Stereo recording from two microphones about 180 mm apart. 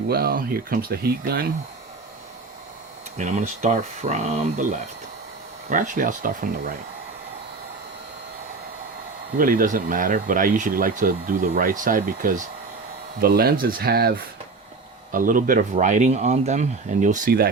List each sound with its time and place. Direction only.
0.1 s speech: 55° right (ahead or behind)
3.2 s speech: 40° right (ahead or behind)
9.4 s speech: 50° right (ahead or behind)